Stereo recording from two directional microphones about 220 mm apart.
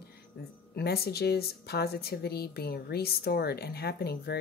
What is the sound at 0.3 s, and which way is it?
Speech, 45° left (ahead or behind).